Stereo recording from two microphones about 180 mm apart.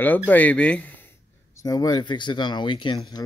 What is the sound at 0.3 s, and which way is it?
Speech, 10° left (ahead or behind).